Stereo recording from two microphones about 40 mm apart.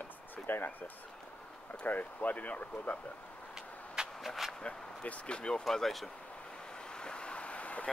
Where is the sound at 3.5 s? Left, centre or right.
Centre.